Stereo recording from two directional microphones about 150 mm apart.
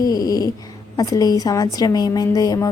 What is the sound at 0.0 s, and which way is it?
Cat, 25° left (ahead or behind).